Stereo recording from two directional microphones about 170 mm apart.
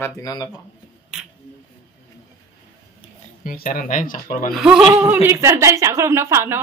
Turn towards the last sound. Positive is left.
turn(degrees=-15)  # may be behind; listen again after turning